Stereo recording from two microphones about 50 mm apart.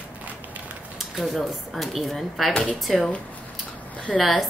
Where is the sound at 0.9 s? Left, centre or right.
Centre.